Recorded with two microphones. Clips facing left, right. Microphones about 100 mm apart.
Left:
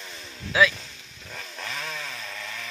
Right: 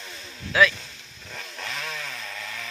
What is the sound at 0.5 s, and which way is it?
Speech, 15° left (ahead or behind).